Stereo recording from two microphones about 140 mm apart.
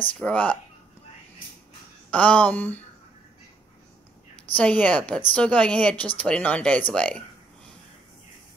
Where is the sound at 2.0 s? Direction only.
10° left (ahead or behind).